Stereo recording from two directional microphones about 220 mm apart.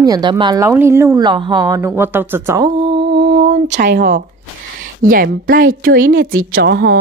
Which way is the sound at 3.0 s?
45° right (ahead or behind).